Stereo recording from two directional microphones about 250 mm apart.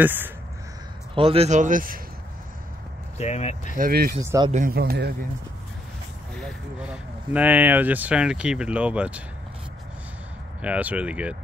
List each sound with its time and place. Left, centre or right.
0.0 s speech: centre
1.1 s speech: right
3.2 s speech: left
3.7 s speech: right
4.2 s speech: centre
4.5 s speech: right
6.3 s speech: centre
10.6 s speech: centre